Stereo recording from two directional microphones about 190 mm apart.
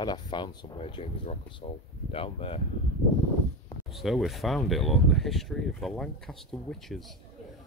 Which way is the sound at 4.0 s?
Centre (ahead or behind).